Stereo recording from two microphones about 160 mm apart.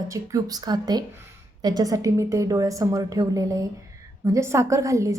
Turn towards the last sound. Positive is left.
turn(degrees=-20)  # may be behind; listen again after turning